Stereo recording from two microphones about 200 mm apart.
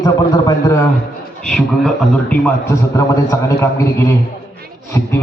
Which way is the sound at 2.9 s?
15° left (ahead or behind).